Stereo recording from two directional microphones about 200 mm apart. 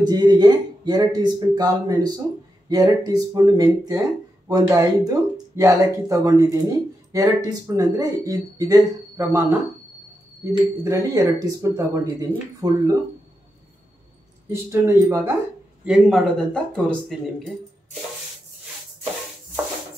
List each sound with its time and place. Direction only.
0.0 s speech: 20° right (ahead or behind)
14.5 s speech: 15° right (ahead or behind); by 17.6 s 5° left (ahead or behind)